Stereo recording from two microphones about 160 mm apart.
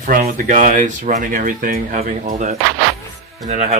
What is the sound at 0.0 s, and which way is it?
Speech, 60° right (ahead or behind).